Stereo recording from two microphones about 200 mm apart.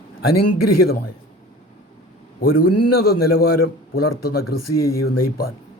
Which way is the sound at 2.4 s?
45° left (ahead or behind).